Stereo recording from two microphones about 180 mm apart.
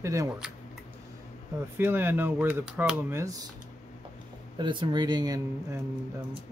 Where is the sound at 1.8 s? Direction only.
10° right (ahead or behind).